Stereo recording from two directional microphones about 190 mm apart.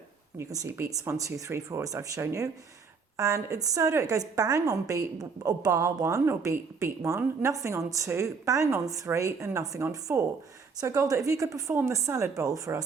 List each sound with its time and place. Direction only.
0.3 s a woman's voice: 15° right (ahead or behind)